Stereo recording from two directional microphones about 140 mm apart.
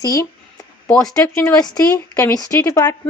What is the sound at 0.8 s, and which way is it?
Speech, 5° left (ahead or behind).